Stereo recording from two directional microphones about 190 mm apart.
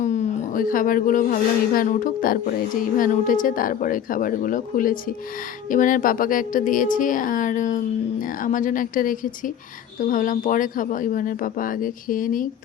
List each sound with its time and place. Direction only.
0.0 s speech: 40° left (ahead or behind)